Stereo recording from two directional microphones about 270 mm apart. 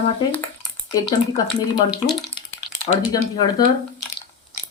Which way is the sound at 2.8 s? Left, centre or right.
Centre.